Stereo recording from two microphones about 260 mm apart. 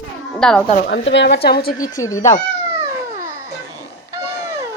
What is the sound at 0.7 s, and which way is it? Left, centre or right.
Speech, left.